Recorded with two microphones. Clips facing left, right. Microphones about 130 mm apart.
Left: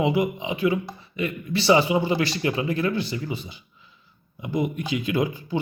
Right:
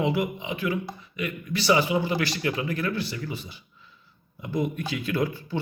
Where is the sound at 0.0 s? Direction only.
20° left (ahead or behind).